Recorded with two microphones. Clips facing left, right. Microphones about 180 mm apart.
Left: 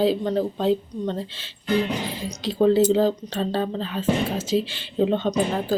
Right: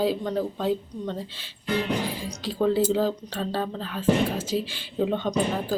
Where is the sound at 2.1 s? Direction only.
10° right (ahead or behind).